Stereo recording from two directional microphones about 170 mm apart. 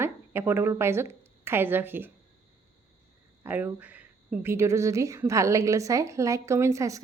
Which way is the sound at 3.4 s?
10° right (ahead or behind).